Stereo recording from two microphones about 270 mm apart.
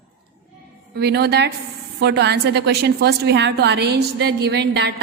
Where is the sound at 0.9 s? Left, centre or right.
Right.